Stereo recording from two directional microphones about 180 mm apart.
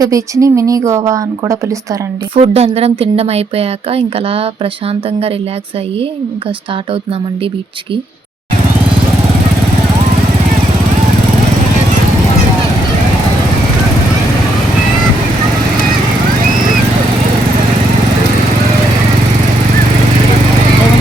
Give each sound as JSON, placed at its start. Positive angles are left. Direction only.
{"t": 0.0, "sound": "speech", "side_deg": -20}
{"t": 2.3, "sound": "speech", "side_deg": -35}